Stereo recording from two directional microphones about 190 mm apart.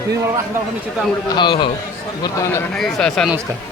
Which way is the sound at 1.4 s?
25° left (ahead or behind).